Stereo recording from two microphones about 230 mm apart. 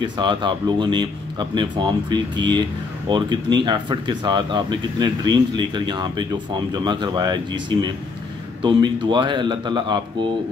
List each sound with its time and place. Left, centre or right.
0.0 s speech: centre
8.6 s speech: centre